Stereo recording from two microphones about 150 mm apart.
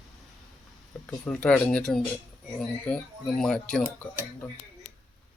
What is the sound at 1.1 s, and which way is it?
Speech, 5° left (ahead or behind).